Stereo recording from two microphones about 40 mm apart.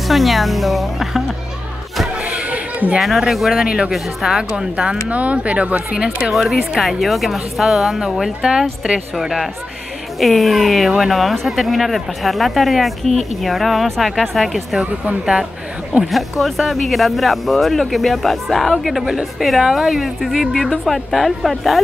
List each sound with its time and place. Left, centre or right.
0.1 s speech: centre
2.4 s a sound: right
3.0 s speech: centre
3.5 s speech: right
3.9 s speech: centre
4.4 s speech: right
5.1 s speech: right
6.3 s speech: centre
16.0 s speech: centre